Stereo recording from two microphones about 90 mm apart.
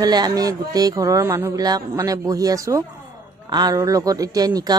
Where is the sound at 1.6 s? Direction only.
45° right (ahead or behind).